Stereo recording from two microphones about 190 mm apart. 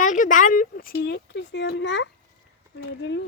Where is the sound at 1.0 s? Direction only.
70° left (ahead or behind).